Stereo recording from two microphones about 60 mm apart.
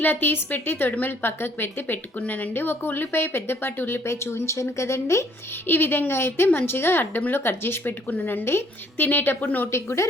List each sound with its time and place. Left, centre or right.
0.0 s a woman's voice: left
5.6 s a woman's voice: left
9.7 s speech: left